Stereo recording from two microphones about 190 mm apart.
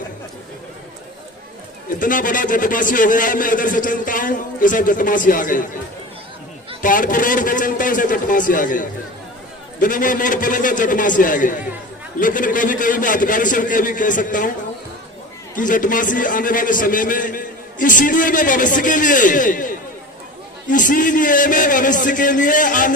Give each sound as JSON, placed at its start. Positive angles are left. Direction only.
{"t": 2.0, "sound": "a man's voice", "side_deg": 45}
{"t": 6.8, "sound": "a man's voice", "side_deg": 45}
{"t": 15.5, "sound": "a man's voice", "side_deg": 45}